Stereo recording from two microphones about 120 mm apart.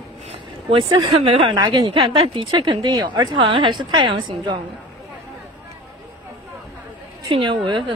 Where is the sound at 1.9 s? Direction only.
45° right (ahead or behind).